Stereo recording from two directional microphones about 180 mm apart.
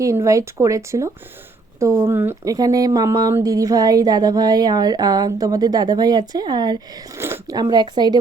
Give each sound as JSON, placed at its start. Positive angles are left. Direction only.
{"t": 0.0, "sound": "speech", "side_deg": -15}